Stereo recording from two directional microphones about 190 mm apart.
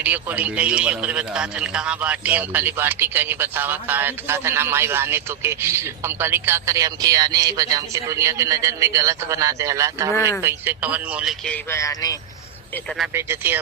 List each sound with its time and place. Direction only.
0.0 s a man's voice: 10° right (ahead or behind)
11.4 s speech: 10° left (ahead or behind)
13.1 s a man's voice: 15° right (ahead or behind)